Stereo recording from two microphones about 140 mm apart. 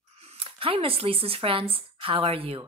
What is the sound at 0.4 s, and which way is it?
A woman's voice, 40° right (ahead or behind).